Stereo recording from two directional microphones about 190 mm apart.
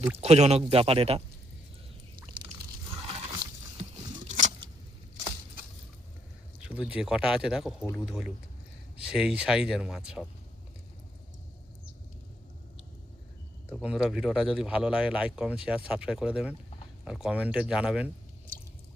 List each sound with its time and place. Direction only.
0.2 s speech: 35° right (ahead or behind)
2.6 s biting: 30° right (ahead or behind)
4.3 s a sound: 40° right (ahead or behind)
6.6 s speech: 5° right (ahead or behind)
13.8 s speech: 5° right (ahead or behind)